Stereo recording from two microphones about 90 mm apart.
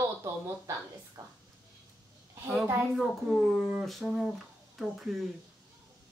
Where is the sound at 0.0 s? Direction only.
30° right (ahead or behind).